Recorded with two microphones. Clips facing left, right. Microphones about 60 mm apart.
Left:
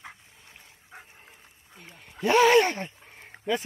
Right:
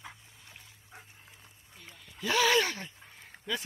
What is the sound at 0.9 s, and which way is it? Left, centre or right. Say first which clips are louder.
Dog: left 6 dB; left.